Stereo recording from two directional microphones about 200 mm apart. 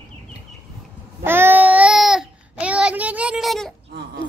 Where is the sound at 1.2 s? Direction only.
10° right (ahead or behind).